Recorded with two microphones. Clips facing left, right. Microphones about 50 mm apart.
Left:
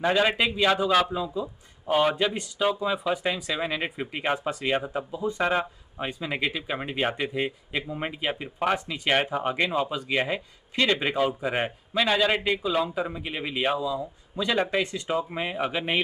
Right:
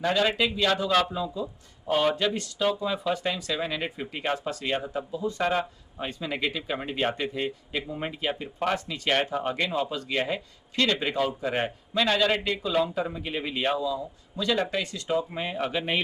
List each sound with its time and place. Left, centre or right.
0.0 s a man's voice: left